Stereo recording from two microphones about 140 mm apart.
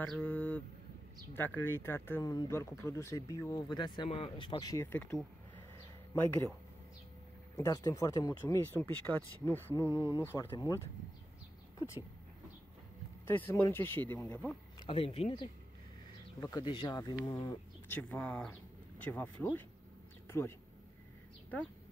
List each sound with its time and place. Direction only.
0.1 s speech: 10° left (ahead or behind)
3.7 s speech: 35° left (ahead or behind)
7.5 s speech: 20° left (ahead or behind)
13.3 s speech: 15° left (ahead or behind)
14.9 s speech: 45° left (ahead or behind)
16.3 s speech: 25° left (ahead or behind)
17.8 s speech: 15° left (ahead or behind)
20.2 s a sound: 15° left (ahead or behind)